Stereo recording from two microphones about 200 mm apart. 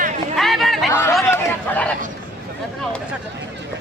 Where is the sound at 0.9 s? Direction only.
10° left (ahead or behind).